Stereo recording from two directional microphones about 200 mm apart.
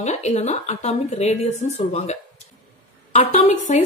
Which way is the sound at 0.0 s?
35° left (ahead or behind).